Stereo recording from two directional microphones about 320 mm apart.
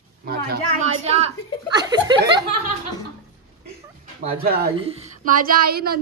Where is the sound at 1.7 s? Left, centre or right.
Centre.